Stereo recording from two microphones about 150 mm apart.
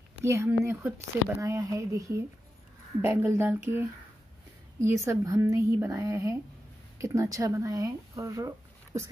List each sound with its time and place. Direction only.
0.2 s speech: 15° right (ahead or behind)